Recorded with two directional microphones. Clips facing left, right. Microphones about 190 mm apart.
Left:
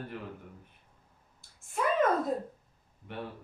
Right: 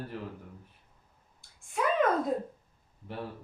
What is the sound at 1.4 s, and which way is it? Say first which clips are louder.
Clicking: even; centre (ahead or behind).